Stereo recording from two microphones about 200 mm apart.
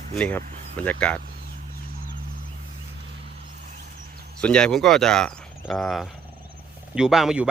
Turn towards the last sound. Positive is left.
turn(degrees=-5)  # may be behind; listen again after turning